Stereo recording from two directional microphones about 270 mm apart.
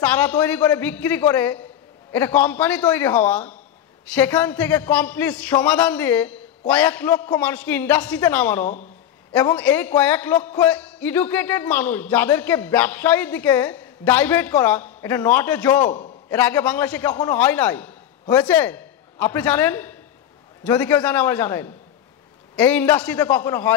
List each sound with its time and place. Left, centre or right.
0.0 s a man's voice: centre